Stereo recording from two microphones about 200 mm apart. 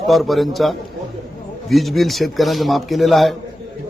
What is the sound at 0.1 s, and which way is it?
Speech, centre (ahead or behind).